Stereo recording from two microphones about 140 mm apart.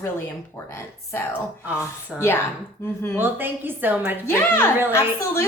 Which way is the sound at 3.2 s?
15° right (ahead or behind).